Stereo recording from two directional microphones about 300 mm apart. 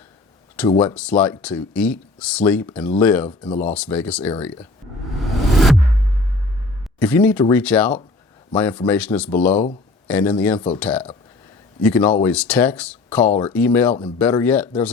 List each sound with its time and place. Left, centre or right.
0.6 s speech: centre
3.2 s speech: centre
3.6 s speech: centre
5.1 s a sound: centre
7.0 s speech: centre